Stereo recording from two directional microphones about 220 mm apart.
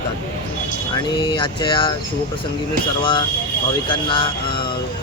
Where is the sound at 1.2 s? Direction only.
20° left (ahead or behind).